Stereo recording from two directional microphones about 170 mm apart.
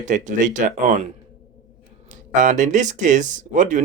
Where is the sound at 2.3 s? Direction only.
45° right (ahead or behind).